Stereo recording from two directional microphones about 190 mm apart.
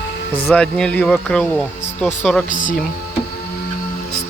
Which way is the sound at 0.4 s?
5° left (ahead or behind).